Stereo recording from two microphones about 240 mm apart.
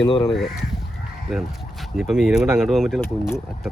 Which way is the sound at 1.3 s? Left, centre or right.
Centre.